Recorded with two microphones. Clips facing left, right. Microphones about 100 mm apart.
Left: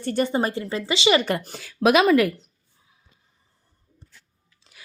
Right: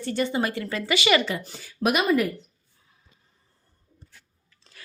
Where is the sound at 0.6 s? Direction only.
25° left (ahead or behind).